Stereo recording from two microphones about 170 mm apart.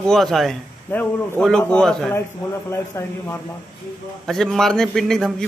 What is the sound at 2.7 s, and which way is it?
Speech, 15° left (ahead or behind).